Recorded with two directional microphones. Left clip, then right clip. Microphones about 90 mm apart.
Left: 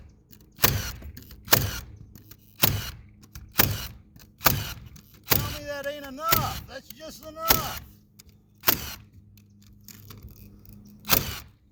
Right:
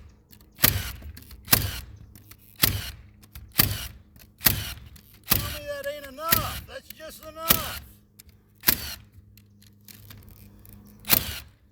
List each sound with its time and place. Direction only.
0.5 s camera: 20° left (ahead or behind)
6.1 s a sound: 15° left (ahead or behind)
8.7 s camera: 20° left (ahead or behind)
11.0 s camera: 20° left (ahead or behind)